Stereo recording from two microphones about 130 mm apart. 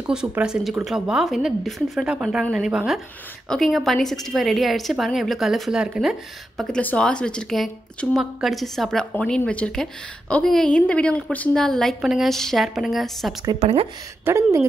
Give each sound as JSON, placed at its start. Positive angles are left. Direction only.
{"t": 0.0, "sound": "a woman's voice", "side_deg": -10}
{"t": 6.6, "sound": "a woman's voice", "side_deg": 10}
{"t": 13.6, "sound": "a woman's voice", "side_deg": -50}
{"t": 14.2, "sound": "speech", "side_deg": -20}